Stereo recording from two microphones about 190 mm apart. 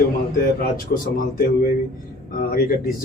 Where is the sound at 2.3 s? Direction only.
45° left (ahead or behind).